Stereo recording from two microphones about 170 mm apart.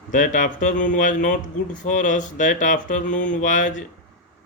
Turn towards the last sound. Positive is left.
turn(degrees=45)  # may be behind; listen again after turning